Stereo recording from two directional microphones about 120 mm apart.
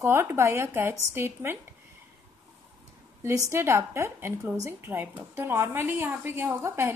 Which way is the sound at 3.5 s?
20° right (ahead or behind).